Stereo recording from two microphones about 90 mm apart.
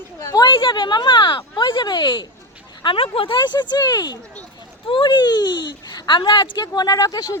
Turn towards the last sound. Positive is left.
turn(degrees=45)  # may be behind; listen again after turning